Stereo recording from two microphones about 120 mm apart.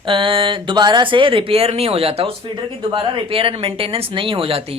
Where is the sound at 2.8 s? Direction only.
40° right (ahead or behind).